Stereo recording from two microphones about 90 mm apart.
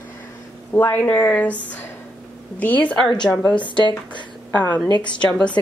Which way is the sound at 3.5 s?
60° left (ahead or behind).